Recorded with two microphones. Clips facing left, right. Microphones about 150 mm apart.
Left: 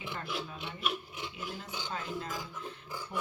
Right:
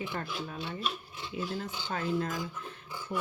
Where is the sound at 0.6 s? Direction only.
15° left (ahead or behind).